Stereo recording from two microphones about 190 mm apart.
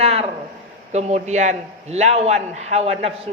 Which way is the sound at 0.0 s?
30° right (ahead or behind).